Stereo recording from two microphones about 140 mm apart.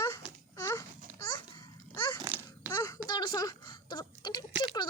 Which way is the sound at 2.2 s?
15° right (ahead or behind).